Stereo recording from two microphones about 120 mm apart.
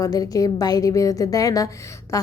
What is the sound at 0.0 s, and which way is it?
A woman's voice, 30° left (ahead or behind).